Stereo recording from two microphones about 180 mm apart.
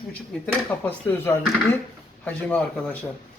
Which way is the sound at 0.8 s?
10° left (ahead or behind).